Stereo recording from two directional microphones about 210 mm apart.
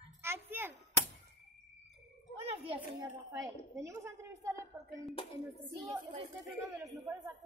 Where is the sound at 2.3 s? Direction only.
30° right (ahead or behind).